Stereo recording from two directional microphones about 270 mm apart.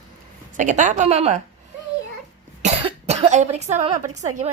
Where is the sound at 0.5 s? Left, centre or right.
Right.